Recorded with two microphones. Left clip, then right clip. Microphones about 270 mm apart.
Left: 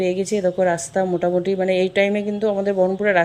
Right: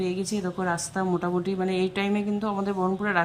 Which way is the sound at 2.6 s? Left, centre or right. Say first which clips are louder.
Left 9 dB; right.